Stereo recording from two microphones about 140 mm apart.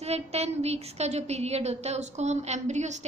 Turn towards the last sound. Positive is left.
turn(degrees=-55)  # may be behind; listen again after turning